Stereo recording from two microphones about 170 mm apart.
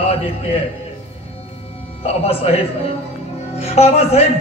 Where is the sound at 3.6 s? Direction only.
40° left (ahead or behind).